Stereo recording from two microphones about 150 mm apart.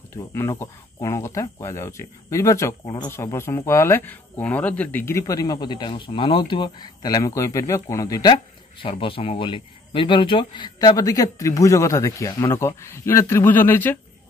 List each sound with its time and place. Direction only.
0.1 s speech: 15° left (ahead or behind)